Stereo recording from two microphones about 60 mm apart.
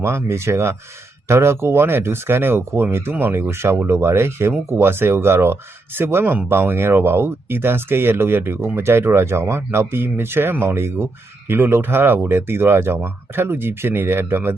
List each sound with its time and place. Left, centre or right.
0.0 s speech: right